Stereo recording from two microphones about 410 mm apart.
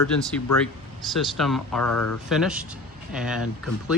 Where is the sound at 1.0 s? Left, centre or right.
Centre.